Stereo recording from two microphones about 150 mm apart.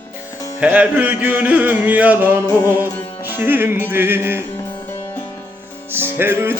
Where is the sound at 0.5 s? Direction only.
10° right (ahead or behind).